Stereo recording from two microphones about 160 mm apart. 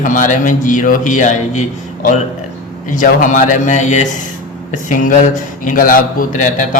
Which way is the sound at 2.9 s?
55° left (ahead or behind).